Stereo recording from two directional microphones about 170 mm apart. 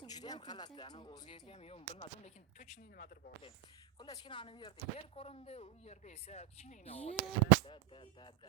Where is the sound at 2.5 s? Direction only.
50° left (ahead or behind).